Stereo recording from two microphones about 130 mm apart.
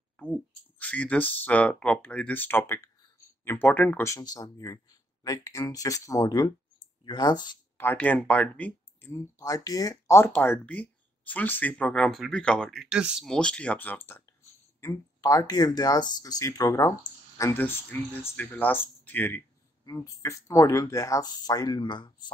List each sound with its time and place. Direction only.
0.7 s speech: 10° left (ahead or behind); by 7.5 s 30° left (ahead or behind)
7.7 s speech: 15° left (ahead or behind)
12.8 s speech: 5° right (ahead or behind)
13.3 s speech: 5° left (ahead or behind); by 16.9 s 25° left (ahead or behind)
17.6 s speech: 15° left (ahead or behind)
19.8 s speech: 25° left (ahead or behind)